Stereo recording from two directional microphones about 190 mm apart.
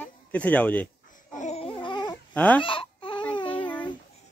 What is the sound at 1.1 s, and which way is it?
Babbling, 40° left (ahead or behind).